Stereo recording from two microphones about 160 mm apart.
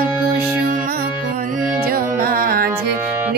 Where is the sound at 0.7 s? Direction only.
60° right (ahead or behind).